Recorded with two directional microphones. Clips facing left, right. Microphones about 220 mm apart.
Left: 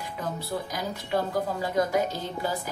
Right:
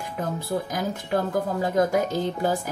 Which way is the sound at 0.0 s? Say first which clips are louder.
Right 4 dB; 50° right (ahead or behind).